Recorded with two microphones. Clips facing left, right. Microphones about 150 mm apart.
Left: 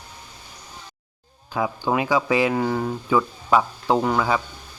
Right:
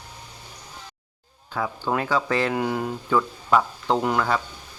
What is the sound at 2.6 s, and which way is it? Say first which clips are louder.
Speech: left 2 dB; 5° right (ahead or behind).